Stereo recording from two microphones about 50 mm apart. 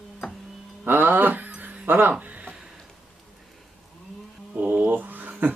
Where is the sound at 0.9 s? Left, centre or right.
Right.